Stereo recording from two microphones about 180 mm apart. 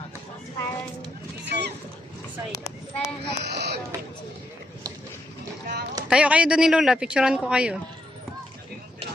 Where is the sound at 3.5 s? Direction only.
65° right (ahead or behind).